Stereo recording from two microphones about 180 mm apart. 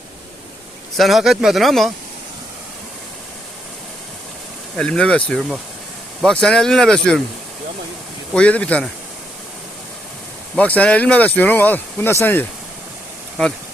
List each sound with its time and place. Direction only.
0.9 s speech: centre (ahead or behind)
4.8 s speech: 5° left (ahead or behind)
8.3 s speech: 5° left (ahead or behind)
10.5 s speech: 10° left (ahead or behind)